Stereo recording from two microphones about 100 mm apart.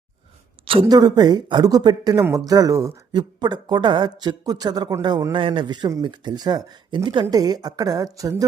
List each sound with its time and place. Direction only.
0.6 s a sound: 65° right (ahead or behind)
0.9 s speech: 40° right (ahead or behind)
2.5 s a woman's voice: 35° right (ahead or behind)
3.1 s speech: 50° right (ahead or behind)
5.3 s a man's voice: 60° right (ahead or behind); by 8.4 s 35° right (ahead or behind)